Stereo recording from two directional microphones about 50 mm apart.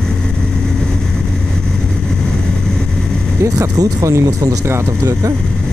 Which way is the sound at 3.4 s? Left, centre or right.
Right.